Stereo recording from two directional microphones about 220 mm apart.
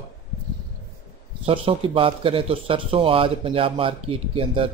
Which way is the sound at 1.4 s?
25° right (ahead or behind).